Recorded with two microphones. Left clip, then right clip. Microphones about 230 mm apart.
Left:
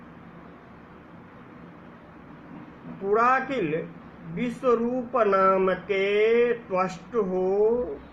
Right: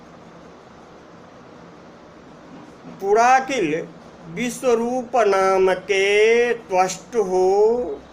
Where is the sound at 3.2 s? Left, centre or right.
Centre.